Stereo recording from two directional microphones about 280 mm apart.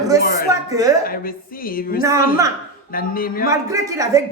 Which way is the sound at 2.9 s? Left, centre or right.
Left.